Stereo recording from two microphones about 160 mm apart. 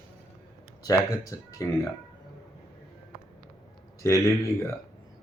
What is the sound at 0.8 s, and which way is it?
Speech, 20° left (ahead or behind).